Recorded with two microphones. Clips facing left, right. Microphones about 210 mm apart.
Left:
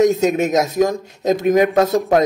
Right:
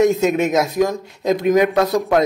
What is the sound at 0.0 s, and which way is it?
A man's voice, 40° left (ahead or behind).